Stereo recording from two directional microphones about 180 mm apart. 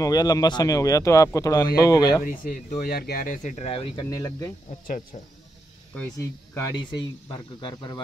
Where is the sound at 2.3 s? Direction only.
50° left (ahead or behind); by 4.0 s 30° left (ahead or behind).